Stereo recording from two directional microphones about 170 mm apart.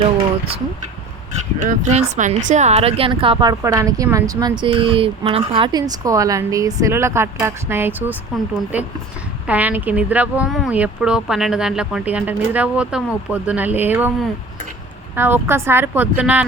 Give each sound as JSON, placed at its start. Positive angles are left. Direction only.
{"t": 0.0, "sound": "a sound", "side_deg": -35}
{"t": 1.5, "sound": "speech", "side_deg": -45}
{"t": 15.1, "sound": "speech", "side_deg": -15}